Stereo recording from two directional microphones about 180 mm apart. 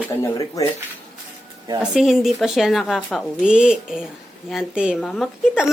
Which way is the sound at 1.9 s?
Centre (ahead or behind).